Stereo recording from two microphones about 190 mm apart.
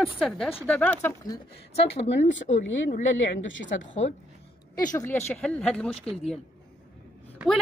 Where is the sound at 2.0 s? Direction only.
75° left (ahead or behind).